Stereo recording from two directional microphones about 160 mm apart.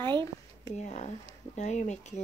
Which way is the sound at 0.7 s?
45° left (ahead or behind).